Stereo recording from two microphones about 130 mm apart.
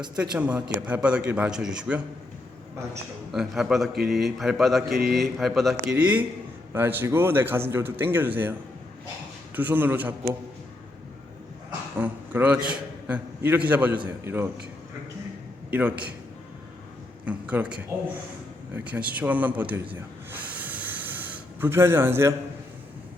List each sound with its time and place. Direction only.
0.2 s speech: 10° right (ahead or behind)
3.3 s mantra: centre (ahead or behind)
5.9 s speech: 10° right (ahead or behind)
9.6 s speech: 15° right (ahead or behind)
11.9 s a man's voice: 15° right (ahead or behind)
15.7 s speech: 10° right (ahead or behind)
17.2 s speech: 10° right (ahead or behind)